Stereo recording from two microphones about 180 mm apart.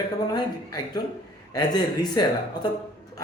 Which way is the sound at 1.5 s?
20° left (ahead or behind).